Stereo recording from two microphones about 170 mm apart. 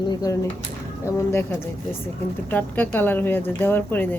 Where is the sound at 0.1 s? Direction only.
20° left (ahead or behind).